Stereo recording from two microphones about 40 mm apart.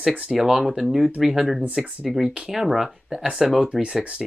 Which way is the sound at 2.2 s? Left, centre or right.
Centre.